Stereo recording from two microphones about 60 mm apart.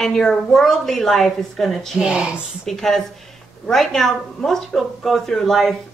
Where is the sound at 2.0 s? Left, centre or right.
Centre.